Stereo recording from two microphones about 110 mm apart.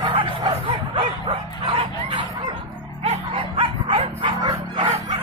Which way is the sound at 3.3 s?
50° right (ahead or behind).